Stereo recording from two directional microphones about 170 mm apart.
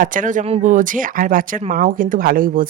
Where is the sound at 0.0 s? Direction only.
50° right (ahead or behind).